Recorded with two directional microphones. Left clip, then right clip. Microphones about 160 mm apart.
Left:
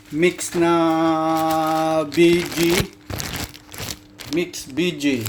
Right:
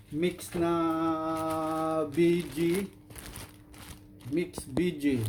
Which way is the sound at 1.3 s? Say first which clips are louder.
Left 12 dB; 40° left (ahead or behind).